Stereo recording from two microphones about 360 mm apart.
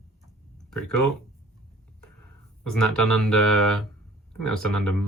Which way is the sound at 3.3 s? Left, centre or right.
Centre.